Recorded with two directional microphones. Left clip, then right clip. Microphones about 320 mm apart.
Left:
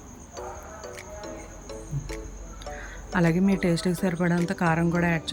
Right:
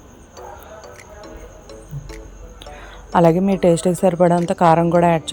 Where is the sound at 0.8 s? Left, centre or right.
Centre.